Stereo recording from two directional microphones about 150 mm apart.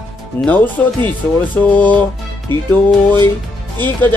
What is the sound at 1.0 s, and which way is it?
Speech, 10° left (ahead or behind).